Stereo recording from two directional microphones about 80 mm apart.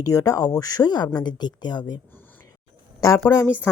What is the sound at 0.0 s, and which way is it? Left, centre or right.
A woman's voice, left.